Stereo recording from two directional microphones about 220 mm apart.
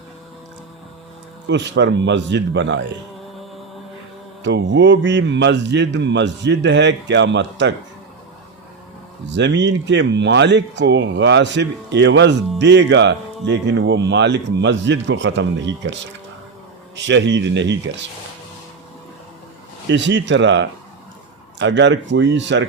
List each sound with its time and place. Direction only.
1.5 s speech: 55° right (ahead or behind)
4.4 s speech: 55° right (ahead or behind)
9.2 s speech: 55° right (ahead or behind)
19.9 s speech: 55° right (ahead or behind)